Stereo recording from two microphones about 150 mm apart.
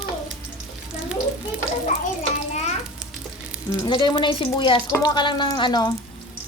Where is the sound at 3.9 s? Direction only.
30° left (ahead or behind).